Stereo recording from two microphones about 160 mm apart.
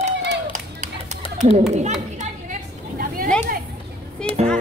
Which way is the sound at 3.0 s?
65° right (ahead or behind).